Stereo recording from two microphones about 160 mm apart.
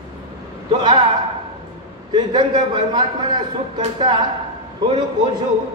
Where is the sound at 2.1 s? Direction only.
25° right (ahead or behind).